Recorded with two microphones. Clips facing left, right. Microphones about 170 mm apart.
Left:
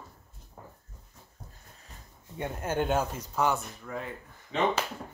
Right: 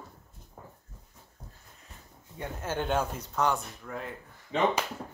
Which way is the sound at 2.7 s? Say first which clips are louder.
Left 1 dB; 5° left (ahead or behind).